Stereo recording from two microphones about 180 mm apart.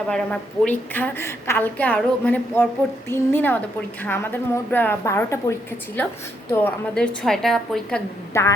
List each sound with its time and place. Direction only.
0.1 s a woman's voice: 5° left (ahead or behind)
8.3 s a woman's voice: 15° left (ahead or behind)